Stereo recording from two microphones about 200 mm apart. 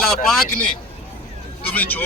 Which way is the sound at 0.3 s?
5° left (ahead or behind).